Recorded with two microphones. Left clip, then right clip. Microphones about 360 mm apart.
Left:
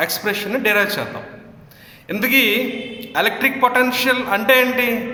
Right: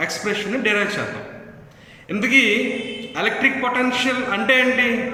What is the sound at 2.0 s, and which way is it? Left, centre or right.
A man's voice, centre.